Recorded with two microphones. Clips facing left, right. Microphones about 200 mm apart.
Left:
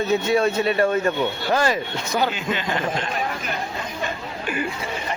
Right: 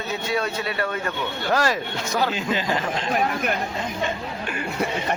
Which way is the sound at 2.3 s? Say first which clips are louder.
Right 1 dB; 35° right (ahead or behind).